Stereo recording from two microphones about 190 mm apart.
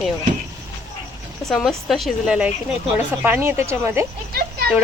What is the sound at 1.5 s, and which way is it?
A woman's voice, centre (ahead or behind).